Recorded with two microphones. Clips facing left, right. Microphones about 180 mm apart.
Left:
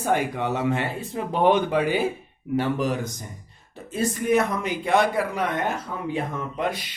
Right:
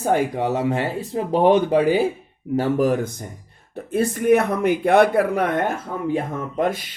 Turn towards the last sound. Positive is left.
turn(degrees=-45)  # may be behind; listen again after turning